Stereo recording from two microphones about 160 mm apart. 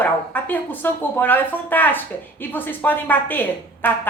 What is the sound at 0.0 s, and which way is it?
Speech, 10° left (ahead or behind).